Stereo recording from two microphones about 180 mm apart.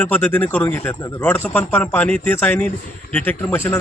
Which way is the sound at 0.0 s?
5° left (ahead or behind).